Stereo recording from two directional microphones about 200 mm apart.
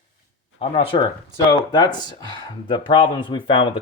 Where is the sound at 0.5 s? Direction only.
30° left (ahead or behind).